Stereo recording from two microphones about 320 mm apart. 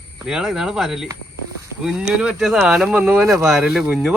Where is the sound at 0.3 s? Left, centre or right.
Centre.